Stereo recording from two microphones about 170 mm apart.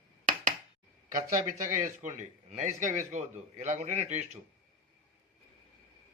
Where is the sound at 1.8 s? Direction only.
45° right (ahead or behind).